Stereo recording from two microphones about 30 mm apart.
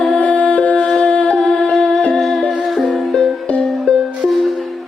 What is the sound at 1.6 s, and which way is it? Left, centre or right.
Music, left.